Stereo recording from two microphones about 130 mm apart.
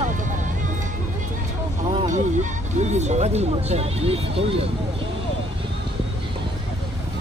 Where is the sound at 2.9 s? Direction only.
60° right (ahead or behind).